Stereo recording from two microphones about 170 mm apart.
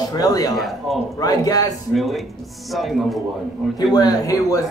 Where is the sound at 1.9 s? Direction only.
Centre (ahead or behind).